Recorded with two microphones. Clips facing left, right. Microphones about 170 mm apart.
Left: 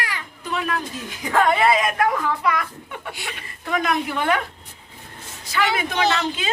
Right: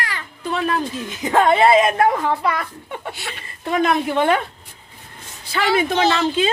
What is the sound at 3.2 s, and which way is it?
Speech, 15° left (ahead or behind).